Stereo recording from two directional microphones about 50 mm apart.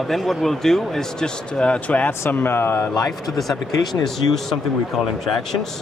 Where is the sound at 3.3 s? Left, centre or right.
Centre.